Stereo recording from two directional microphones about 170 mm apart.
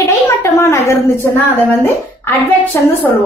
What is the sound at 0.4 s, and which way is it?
Speech, 15° left (ahead or behind).